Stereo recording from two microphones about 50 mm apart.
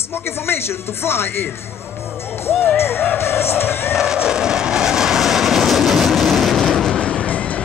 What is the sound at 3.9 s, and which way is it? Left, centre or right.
Vehicle, centre.